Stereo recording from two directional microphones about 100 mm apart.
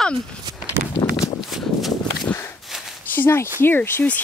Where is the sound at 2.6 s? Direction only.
Centre (ahead or behind).